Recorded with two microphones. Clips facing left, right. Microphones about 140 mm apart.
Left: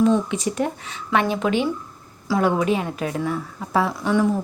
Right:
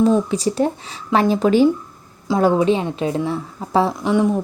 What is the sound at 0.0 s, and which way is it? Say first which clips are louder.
A woman's voice: right 3 dB; 35° right (ahead or behind).